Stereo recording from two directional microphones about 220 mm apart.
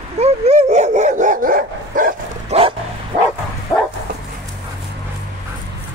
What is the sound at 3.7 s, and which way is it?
Bow-wow, 10° left (ahead or behind).